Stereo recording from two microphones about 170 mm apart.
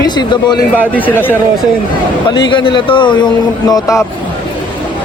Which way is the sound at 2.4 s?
30° left (ahead or behind).